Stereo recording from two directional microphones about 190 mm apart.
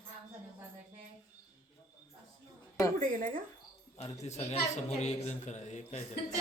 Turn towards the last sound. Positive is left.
turn(degrees=40)  # may be behind; listen again after turning